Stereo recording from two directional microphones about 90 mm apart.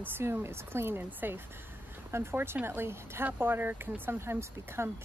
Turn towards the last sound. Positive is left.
turn(degrees=-25)  # may be behind; listen again after turning